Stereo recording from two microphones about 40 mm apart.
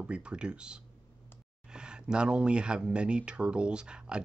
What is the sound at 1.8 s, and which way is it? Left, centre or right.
Speech, right.